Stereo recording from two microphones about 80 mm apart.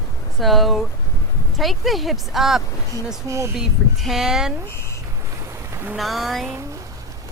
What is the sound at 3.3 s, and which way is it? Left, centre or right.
Speech, right.